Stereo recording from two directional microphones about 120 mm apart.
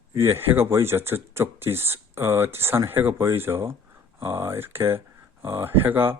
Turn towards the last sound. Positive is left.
turn(degrees=-15)  # may be behind; listen again after turning